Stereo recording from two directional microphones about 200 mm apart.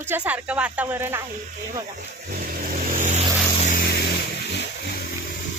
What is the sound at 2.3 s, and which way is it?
Vehicle, 45° right (ahead or behind).